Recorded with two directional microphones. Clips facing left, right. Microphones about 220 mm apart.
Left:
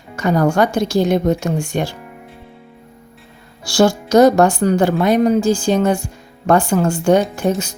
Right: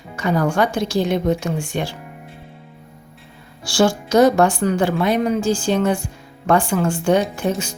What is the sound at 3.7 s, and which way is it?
A woman's voice, 40° left (ahead or behind).